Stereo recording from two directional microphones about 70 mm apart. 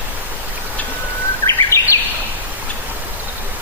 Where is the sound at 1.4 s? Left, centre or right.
Left.